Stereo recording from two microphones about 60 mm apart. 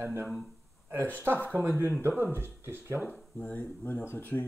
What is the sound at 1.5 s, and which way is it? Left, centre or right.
Speech, right.